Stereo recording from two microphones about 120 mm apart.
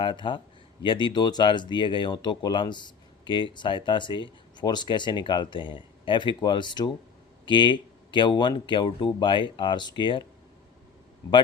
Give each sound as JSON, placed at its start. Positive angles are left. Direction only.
{"t": 0.0, "sound": "speech", "side_deg": 45}